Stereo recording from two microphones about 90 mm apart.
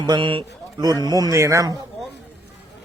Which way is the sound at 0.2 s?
70° right (ahead or behind).